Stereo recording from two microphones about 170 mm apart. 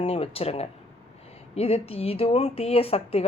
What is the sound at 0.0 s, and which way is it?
Speech, 35° left (ahead or behind).